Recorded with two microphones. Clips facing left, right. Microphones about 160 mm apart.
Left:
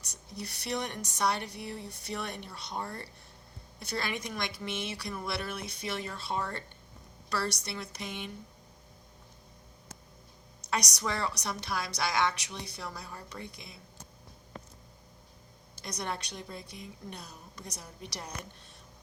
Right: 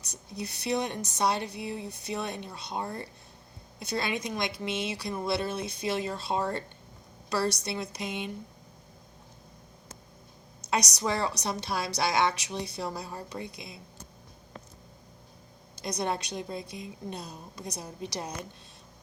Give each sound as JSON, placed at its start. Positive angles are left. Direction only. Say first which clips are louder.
{"t": 0.0, "sound": "a woman's voice", "louder": "right 4 dB", "side_deg": -20}
{"t": 10.7, "sound": "a woman's voice", "louder": "right 4 dB", "side_deg": -20}
{"t": 13.3, "sound": "a woman's voice", "louder": "right 5 dB", "side_deg": -15}
{"t": 15.8, "sound": "a woman's voice", "louder": "right 6 dB", "side_deg": -20}